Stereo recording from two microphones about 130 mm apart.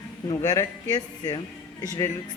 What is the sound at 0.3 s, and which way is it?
Speech, 30° left (ahead or behind).